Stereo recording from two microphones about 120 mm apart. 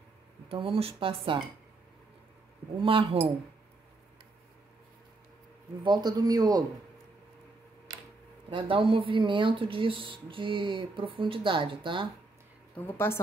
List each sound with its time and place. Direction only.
0.5 s speech: 50° right (ahead or behind)
2.8 s speech: 50° right (ahead or behind)
5.9 s speech: 35° right (ahead or behind)
8.5 s speech: 45° right (ahead or behind)
12.7 s a woman's voice: 20° left (ahead or behind)